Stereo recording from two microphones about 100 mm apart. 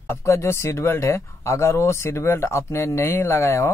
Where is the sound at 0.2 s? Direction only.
30° left (ahead or behind).